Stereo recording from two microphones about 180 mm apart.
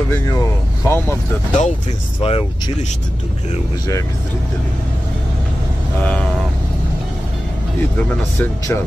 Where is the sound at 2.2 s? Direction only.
30° left (ahead or behind).